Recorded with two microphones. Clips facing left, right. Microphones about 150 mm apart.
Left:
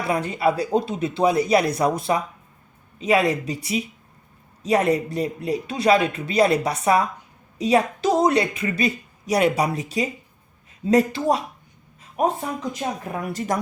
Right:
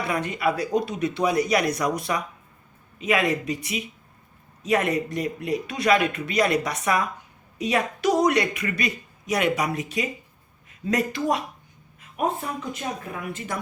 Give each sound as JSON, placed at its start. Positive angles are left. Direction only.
{"t": 0.1, "sound": "speech", "side_deg": 30}